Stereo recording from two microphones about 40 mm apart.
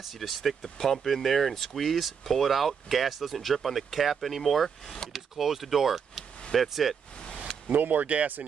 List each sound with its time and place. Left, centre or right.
0.0 s speech: centre
7.6 s speech: right